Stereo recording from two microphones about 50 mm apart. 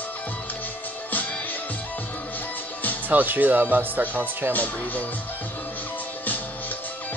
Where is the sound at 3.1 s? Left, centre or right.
Right.